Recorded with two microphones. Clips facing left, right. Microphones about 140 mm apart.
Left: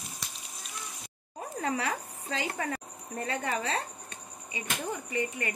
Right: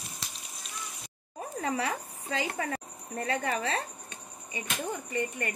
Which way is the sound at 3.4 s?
25° left (ahead or behind).